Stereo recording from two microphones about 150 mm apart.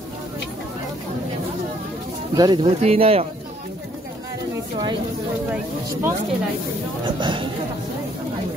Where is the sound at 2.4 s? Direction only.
30° right (ahead or behind).